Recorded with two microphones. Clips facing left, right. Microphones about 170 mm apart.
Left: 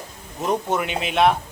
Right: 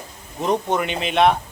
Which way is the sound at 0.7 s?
5° left (ahead or behind).